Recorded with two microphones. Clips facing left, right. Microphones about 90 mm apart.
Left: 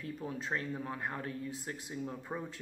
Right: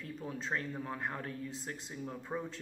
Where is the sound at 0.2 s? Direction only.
10° left (ahead or behind).